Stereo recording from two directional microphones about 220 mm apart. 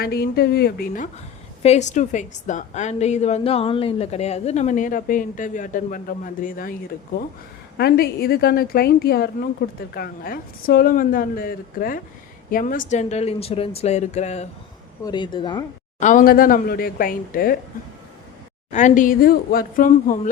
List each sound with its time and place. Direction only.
0.0 s a woman's voice: 45° left (ahead or behind)
7.8 s a woman's voice: 45° left (ahead or behind)
15.0 s speech: 20° left (ahead or behind)
16.0 s a woman's voice: 35° left (ahead or behind)
18.7 s a woman's voice: 35° left (ahead or behind)